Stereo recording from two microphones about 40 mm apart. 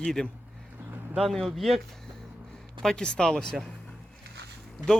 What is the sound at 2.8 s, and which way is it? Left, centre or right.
Speech, centre.